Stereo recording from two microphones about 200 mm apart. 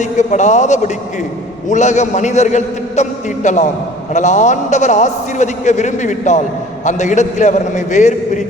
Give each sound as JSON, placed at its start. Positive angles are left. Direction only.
{"t": 0.0, "sound": "a man's voice", "side_deg": 35}